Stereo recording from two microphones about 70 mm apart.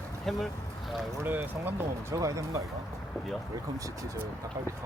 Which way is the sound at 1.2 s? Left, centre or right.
Right.